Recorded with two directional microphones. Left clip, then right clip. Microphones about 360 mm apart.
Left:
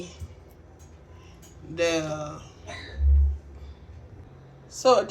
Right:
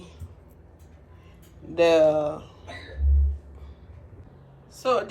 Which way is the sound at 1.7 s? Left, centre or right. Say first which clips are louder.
Right 8 dB; centre.